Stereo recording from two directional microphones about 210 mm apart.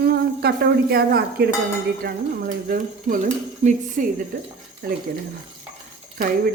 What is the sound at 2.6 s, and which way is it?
Speech, 40° right (ahead or behind).